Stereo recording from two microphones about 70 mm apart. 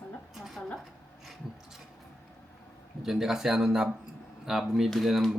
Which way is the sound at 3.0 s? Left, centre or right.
Centre.